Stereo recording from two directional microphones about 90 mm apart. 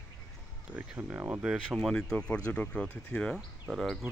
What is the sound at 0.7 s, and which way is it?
Speech, 20° right (ahead or behind).